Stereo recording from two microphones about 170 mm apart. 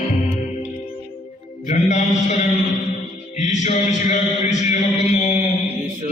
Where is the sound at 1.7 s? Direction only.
45° left (ahead or behind).